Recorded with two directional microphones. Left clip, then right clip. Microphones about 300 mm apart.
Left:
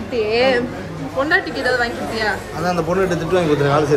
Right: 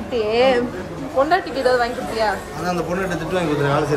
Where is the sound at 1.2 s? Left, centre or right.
Centre.